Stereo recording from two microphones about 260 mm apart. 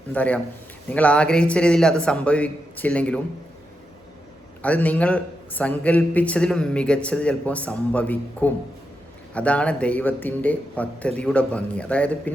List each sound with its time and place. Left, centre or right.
0.1 s a man's voice: centre
4.6 s a man's voice: centre